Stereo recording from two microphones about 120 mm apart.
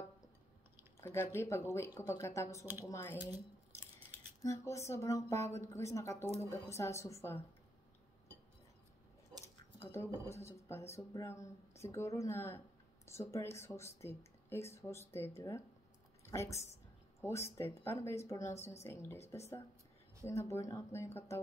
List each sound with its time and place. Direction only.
1.0 s speech: 20° left (ahead or behind)
4.4 s speech: 25° left (ahead or behind)
9.8 s a woman's voice: 20° left (ahead or behind)